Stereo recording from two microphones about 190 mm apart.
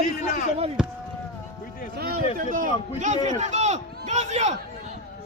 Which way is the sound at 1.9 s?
50° right (ahead or behind).